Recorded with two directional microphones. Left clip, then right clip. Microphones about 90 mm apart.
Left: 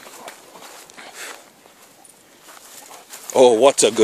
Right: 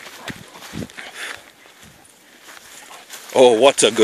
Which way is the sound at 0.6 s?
10° left (ahead or behind).